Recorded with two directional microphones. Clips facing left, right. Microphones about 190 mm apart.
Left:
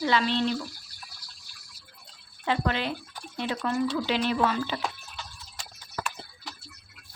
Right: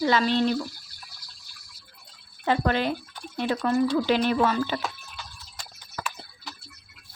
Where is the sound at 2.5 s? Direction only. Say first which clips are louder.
Right 4 dB; 45° right (ahead or behind).